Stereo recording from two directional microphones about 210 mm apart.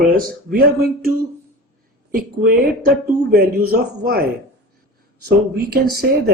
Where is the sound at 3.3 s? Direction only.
45° right (ahead or behind).